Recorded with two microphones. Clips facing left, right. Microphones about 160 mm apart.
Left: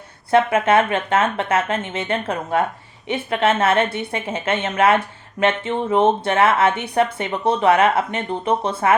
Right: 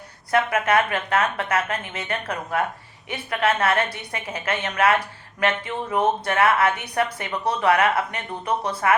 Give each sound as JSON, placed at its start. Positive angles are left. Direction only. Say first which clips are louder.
{"t": 0.3, "sound": "a woman's voice", "louder": "left 5 dB", "side_deg": 25}